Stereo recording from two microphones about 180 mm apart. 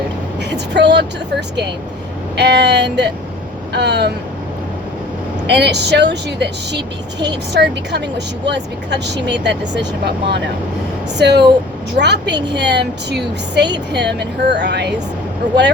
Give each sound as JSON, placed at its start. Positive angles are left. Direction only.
{"t": 0.5, "sound": "a woman's voice", "side_deg": -70}
{"t": 5.5, "sound": "a woman's voice", "side_deg": -70}